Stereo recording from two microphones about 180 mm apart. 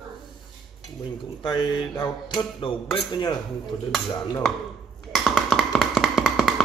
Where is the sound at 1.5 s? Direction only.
25° left (ahead or behind).